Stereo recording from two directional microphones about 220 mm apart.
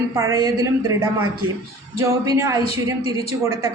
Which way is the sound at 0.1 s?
15° right (ahead or behind).